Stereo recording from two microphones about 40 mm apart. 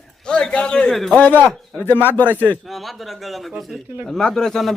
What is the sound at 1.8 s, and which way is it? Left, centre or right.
Speech, left.